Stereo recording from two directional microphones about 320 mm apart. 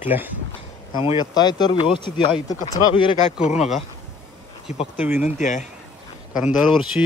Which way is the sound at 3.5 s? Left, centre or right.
Centre.